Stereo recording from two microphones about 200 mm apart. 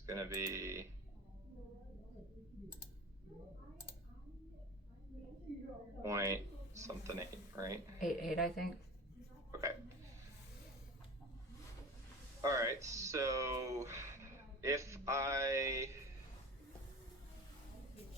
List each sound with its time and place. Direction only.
0.0 s speech: 15° right (ahead or behind)
6.0 s speech: 15° right (ahead or behind)
8.0 s a woman's voice: centre (ahead or behind)
9.5 s hiccup: 15° right (ahead or behind)
12.4 s speech: 15° right (ahead or behind)